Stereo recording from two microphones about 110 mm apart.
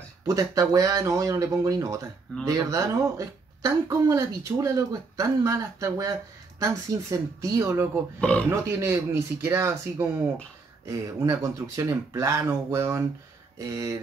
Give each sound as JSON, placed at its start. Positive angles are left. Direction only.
{"t": 0.3, "sound": "speech", "side_deg": -30}
{"t": 8.2, "sound": "speech", "side_deg": 10}
{"t": 8.5, "sound": "speech", "side_deg": -25}